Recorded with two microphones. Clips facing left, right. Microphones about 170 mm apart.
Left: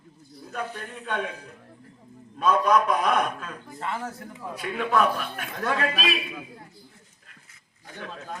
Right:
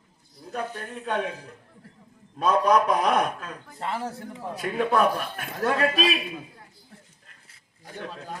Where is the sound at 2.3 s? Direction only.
40° right (ahead or behind).